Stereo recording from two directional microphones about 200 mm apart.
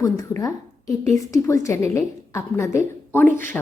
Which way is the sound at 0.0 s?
15° left (ahead or behind).